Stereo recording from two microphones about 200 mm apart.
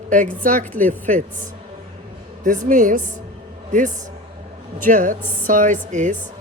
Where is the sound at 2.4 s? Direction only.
40° right (ahead or behind).